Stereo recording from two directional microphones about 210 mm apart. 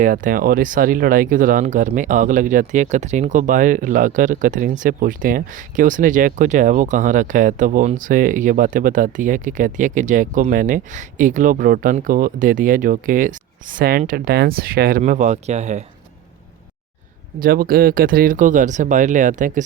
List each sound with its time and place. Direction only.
0.0 s speech: 40° right (ahead or behind)
17.4 s speech: 45° right (ahead or behind)